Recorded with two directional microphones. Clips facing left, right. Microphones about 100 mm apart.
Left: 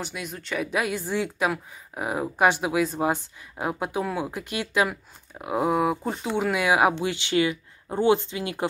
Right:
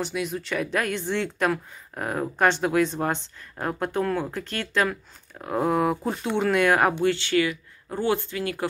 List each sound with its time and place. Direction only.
0.0 s speech: centre (ahead or behind); by 8.6 s 20° left (ahead or behind)